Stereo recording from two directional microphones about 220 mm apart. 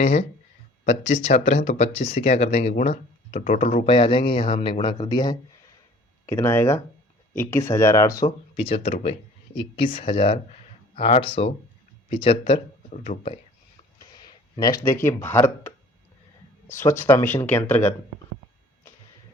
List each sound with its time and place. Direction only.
0.0 s speech: 30° left (ahead or behind)
8.5 s speech: 25° left (ahead or behind)
14.0 s speech: 20° left (ahead or behind)